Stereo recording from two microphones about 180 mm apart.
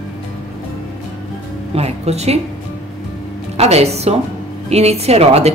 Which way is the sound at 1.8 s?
35° right (ahead or behind).